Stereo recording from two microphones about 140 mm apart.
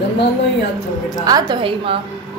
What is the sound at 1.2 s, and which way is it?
Speech, 30° right (ahead or behind).